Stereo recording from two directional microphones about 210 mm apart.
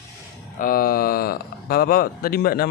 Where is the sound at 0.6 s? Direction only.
45° left (ahead or behind).